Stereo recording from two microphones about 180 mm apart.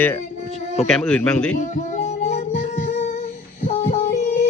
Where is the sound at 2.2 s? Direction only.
35° left (ahead or behind).